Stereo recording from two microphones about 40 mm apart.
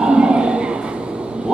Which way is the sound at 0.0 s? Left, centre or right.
Right.